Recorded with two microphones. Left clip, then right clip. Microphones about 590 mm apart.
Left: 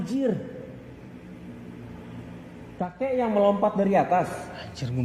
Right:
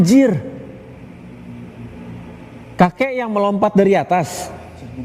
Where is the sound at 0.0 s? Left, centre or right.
Right.